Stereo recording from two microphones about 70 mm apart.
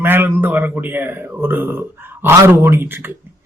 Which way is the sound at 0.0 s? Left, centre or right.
Right.